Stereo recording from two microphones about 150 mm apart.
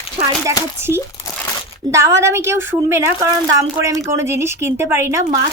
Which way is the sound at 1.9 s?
20° right (ahead or behind).